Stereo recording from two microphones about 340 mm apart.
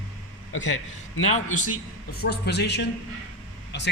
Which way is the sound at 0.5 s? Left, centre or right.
Left.